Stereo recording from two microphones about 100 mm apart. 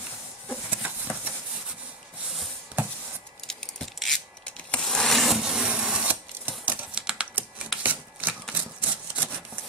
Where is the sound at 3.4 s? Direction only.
5° left (ahead or behind).